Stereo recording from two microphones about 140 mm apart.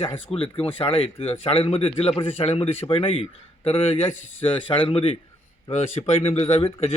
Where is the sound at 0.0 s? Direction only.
40° left (ahead or behind).